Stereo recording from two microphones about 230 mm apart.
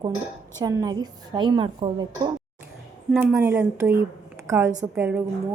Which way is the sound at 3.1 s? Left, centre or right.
Centre.